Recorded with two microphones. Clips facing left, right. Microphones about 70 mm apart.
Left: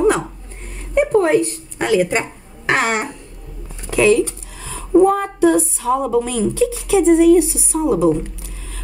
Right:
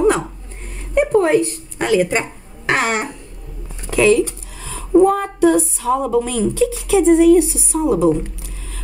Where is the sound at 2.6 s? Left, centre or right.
Centre.